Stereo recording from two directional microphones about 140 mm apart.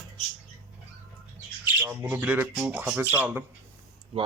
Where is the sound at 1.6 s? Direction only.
15° right (ahead or behind).